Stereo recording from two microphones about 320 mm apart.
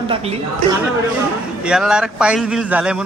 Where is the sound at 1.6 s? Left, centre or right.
Centre.